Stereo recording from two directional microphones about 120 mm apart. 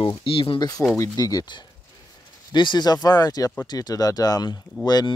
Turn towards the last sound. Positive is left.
turn(degrees=35)  # may be behind; listen again after turning